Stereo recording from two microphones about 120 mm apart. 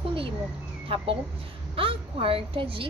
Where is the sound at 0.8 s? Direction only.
50° right (ahead or behind).